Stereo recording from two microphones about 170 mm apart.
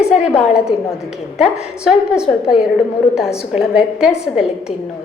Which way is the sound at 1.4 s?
5° right (ahead or behind).